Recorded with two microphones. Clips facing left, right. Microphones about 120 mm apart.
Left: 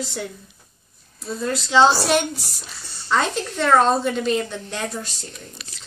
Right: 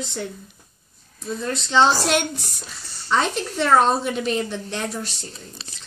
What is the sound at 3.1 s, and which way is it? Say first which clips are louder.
A woman's voice: even; centre (ahead or behind).